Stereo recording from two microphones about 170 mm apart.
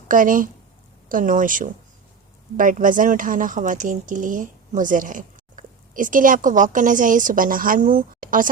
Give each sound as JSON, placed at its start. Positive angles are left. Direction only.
{"t": 0.1, "sound": "speech", "side_deg": -50}